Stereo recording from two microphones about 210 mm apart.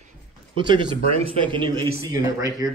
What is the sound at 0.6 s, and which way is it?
A man's voice, 20° right (ahead or behind).